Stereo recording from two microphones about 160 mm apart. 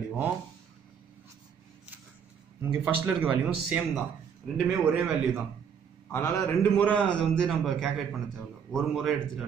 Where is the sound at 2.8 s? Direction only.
10° right (ahead or behind).